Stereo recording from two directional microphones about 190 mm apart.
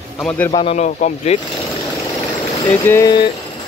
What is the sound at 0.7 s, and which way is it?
Speech, 40° left (ahead or behind).